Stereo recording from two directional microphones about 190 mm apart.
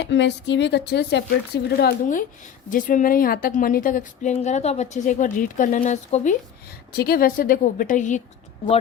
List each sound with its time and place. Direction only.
0.0 s a woman's voice: 70° left (ahead or behind); by 6.3 s 40° left (ahead or behind)
6.9 s a woman's voice: 55° left (ahead or behind)